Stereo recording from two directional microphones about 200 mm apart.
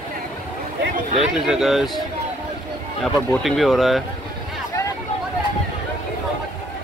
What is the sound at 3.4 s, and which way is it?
Speech, centre (ahead or behind).